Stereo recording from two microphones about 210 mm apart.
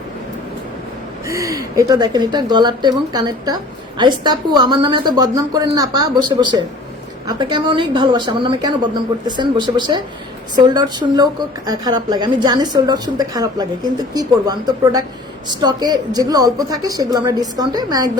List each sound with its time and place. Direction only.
1.3 s a woman's voice: 15° right (ahead or behind)